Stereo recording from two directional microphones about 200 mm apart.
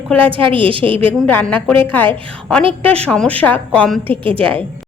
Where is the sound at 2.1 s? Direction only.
25° right (ahead or behind).